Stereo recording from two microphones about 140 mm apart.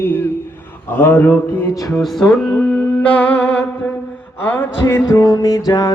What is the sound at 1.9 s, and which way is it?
Music, centre (ahead or behind).